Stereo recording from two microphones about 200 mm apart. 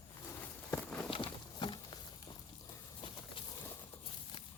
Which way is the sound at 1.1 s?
25° left (ahead or behind).